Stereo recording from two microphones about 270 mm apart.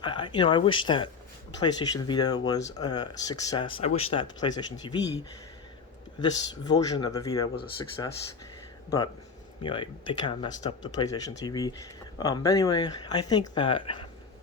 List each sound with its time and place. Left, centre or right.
0.0 s speech: centre
6.1 s speech: centre
9.6 s speech: centre